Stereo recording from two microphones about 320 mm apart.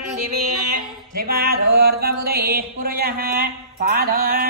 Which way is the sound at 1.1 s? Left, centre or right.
Right.